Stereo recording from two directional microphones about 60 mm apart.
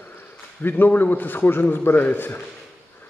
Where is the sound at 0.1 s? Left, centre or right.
Left.